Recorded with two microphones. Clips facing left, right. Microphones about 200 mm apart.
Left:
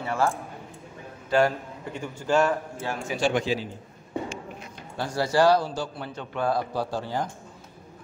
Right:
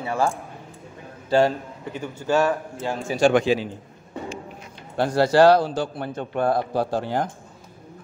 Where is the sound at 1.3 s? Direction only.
25° right (ahead or behind).